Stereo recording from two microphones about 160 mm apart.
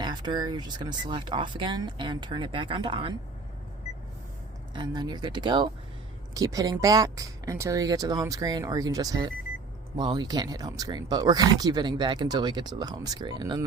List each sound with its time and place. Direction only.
0.0 s speech: 30° right (ahead or behind)
4.7 s speech: 25° right (ahead or behind)